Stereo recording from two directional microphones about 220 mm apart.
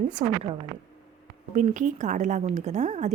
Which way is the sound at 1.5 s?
35° right (ahead or behind).